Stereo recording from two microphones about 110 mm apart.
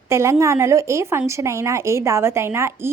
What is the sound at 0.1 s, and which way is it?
A woman's voice, 25° right (ahead or behind).